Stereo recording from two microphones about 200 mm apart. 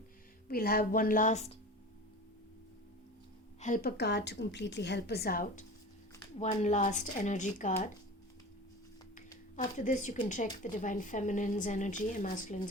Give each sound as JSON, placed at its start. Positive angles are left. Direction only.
{"t": 0.4, "sound": "a woman's voice", "side_deg": 50}
{"t": 3.6, "sound": "a woman's voice", "side_deg": 45}
{"t": 9.7, "sound": "speech", "side_deg": 40}